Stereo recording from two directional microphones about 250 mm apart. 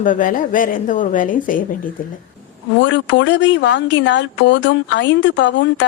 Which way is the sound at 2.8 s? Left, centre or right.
Left.